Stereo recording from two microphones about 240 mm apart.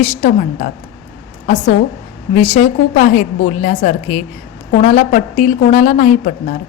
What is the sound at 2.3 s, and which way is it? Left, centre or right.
A woman's voice, left.